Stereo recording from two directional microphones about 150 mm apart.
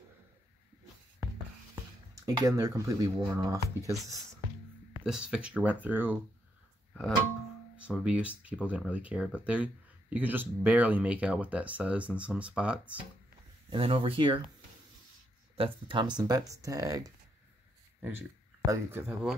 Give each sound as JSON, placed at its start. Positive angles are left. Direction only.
{"t": 2.2, "sound": "speech", "side_deg": -25}
{"t": 5.0, "sound": "speech", "side_deg": -5}
{"t": 6.9, "sound": "music", "side_deg": 5}
{"t": 7.7, "sound": "speech", "side_deg": -5}
{"t": 13.7, "sound": "speech", "side_deg": -35}
{"t": 15.5, "sound": "speech", "side_deg": -35}
{"t": 18.7, "sound": "speech", "side_deg": -15}